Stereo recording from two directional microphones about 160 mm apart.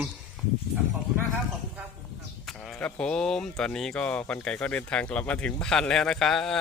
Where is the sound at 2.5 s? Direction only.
5° left (ahead or behind).